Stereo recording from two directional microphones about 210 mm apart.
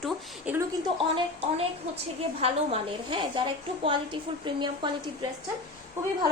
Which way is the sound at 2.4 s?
25° right (ahead or behind).